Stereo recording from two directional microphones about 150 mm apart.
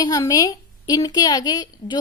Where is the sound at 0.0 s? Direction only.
25° left (ahead or behind).